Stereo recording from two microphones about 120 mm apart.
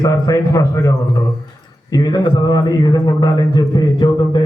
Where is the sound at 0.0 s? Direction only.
30° left (ahead or behind).